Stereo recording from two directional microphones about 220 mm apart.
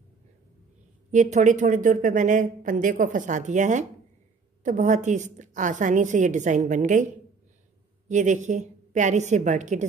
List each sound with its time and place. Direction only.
1.1 s speech: 35° right (ahead or behind)
8.1 s speech: 35° right (ahead or behind)